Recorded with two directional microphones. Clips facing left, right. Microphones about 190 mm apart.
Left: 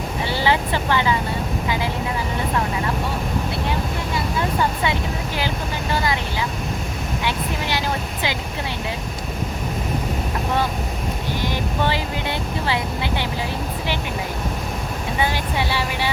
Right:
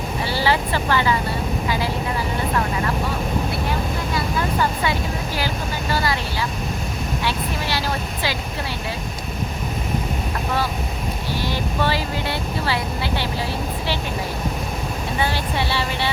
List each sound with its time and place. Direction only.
0.3 s speech: 20° left (ahead or behind)
5.9 s speech: 20° left (ahead or behind)
7.3 s speech: 20° left (ahead or behind)
11.4 s speech: 20° left (ahead or behind)
15.2 s speech: 15° left (ahead or behind)